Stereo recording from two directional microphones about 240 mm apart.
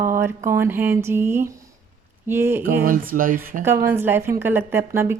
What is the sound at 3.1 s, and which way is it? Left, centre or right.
Speech, right.